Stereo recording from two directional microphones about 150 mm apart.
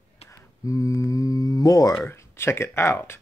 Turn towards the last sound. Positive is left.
turn(degrees=15)  # may be behind; listen again after turning